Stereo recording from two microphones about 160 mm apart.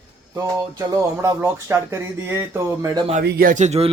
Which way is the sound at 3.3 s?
65° right (ahead or behind).